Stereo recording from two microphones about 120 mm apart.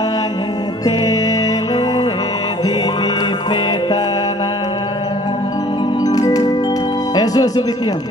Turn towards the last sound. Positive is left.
turn(degrees=30)  # may be behind; listen again after turning